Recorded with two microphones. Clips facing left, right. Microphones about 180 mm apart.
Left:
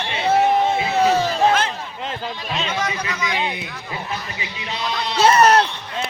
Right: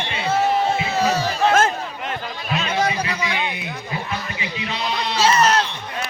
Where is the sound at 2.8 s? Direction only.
30° right (ahead or behind).